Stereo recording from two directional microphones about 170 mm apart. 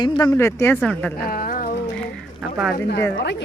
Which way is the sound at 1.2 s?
60° left (ahead or behind).